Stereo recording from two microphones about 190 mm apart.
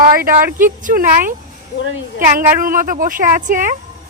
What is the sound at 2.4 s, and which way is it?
Speech, 45° right (ahead or behind).